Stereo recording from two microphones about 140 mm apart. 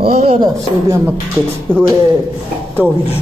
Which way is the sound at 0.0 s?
45° right (ahead or behind).